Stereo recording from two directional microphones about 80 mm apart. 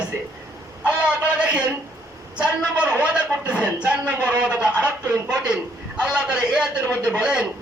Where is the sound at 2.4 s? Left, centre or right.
Centre.